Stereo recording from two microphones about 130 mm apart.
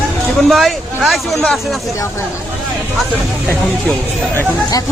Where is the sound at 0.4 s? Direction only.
Centre (ahead or behind).